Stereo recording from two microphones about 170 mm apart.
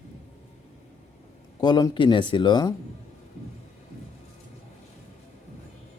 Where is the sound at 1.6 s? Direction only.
25° left (ahead or behind).